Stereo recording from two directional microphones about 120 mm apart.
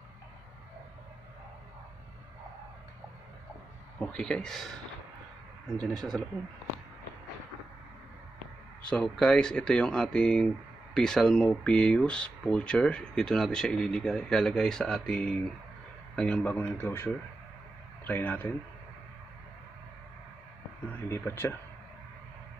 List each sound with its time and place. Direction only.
4.0 s speech: 5° left (ahead or behind)
5.7 s speech: 5° left (ahead or behind)
8.8 s speech: 5° left (ahead or behind)
21.1 s speech: 15° left (ahead or behind)